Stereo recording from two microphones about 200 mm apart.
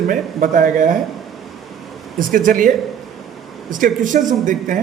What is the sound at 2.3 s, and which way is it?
Speech, 40° right (ahead or behind).